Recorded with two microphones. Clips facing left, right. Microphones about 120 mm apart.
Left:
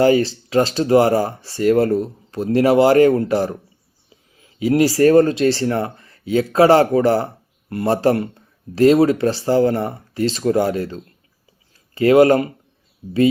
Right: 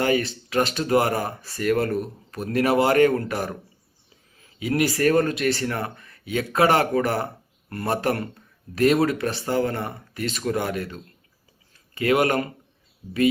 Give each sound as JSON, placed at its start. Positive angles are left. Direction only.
{"t": 0.0, "sound": "speech", "side_deg": 30}